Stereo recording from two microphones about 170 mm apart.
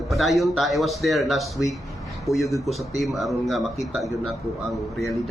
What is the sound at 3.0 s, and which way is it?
Speech, centre (ahead or behind).